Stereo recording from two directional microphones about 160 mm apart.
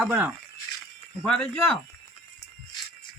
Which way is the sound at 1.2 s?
10° left (ahead or behind).